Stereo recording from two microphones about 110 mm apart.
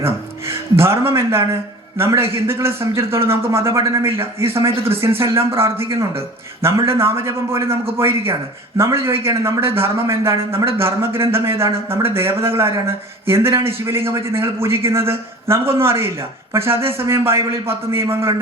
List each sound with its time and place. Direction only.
0.0 s a man's voice: 25° right (ahead or behind)
4.7 s speech: 60° right (ahead or behind)
5.5 s a man's voice: 25° right (ahead or behind)